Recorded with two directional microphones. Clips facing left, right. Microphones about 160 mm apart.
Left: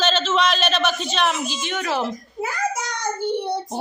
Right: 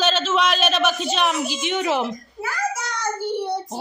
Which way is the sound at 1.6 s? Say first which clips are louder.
Right 3 dB; 20° right (ahead or behind).